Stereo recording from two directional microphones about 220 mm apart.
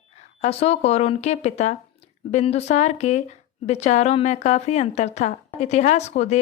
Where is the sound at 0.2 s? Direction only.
30° left (ahead or behind).